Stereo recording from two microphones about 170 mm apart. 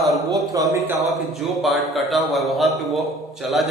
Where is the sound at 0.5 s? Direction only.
20° right (ahead or behind).